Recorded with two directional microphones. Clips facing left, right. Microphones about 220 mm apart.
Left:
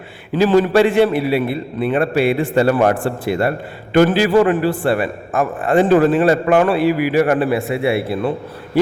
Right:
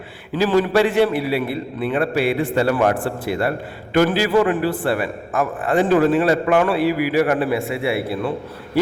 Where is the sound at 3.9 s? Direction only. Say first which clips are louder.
Left 4 dB; 25° left (ahead or behind).